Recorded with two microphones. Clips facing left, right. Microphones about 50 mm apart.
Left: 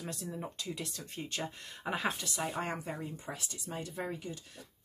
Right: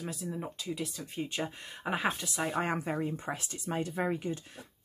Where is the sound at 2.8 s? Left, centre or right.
Right.